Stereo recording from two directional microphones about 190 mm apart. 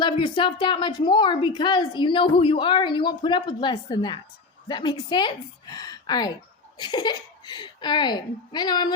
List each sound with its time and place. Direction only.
0.0 s a woman's voice: 25° left (ahead or behind)